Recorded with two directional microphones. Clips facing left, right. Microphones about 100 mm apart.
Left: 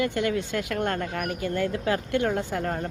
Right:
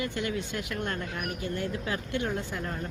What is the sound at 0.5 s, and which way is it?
A woman's voice, 70° left (ahead or behind).